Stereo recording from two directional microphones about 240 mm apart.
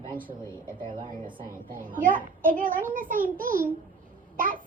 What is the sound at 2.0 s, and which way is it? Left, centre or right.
A child's voice, right.